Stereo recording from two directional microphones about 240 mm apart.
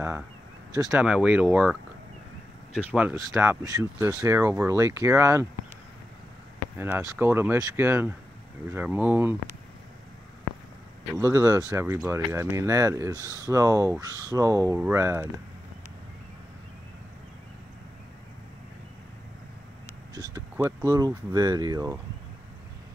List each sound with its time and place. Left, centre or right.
0.8 s speech: centre
6.8 s speech: centre
11.1 s speech: centre
20.3 s a sound: centre
20.9 s speech: centre